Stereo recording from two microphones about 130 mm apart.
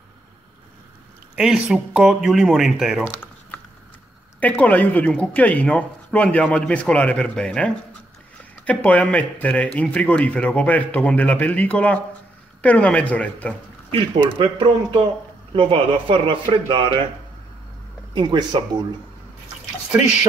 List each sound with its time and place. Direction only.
1.3 s speech: 5° right (ahead or behind)
4.4 s speech: 10° left (ahead or behind)
14.4 s a man's voice: 40° right (ahead or behind)
18.1 s a man's voice: 35° right (ahead or behind)